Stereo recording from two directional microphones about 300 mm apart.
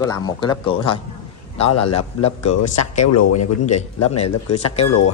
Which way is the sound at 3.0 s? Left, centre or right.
Left.